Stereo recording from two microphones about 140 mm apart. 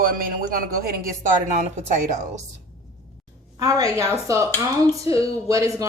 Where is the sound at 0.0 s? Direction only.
90° right.